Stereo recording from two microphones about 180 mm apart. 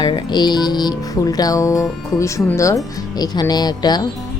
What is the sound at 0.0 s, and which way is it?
Speech, 25° left (ahead or behind).